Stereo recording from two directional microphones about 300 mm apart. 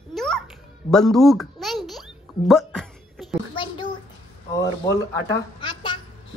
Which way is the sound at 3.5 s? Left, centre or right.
Centre.